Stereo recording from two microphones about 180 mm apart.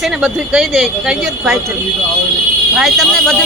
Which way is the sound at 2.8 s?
Centre (ahead or behind).